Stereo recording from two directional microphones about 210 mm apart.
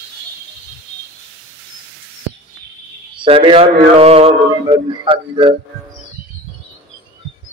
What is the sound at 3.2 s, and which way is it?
Music, 25° right (ahead or behind).